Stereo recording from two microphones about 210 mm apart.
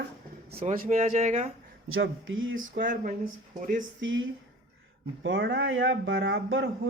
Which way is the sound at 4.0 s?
65° right (ahead or behind).